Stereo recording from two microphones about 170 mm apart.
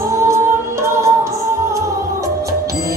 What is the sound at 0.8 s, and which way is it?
Music, 15° right (ahead or behind).